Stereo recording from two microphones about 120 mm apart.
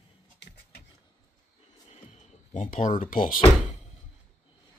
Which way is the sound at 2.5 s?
90° left.